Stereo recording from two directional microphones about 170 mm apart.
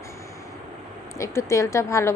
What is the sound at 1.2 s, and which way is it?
Speech, 20° left (ahead or behind).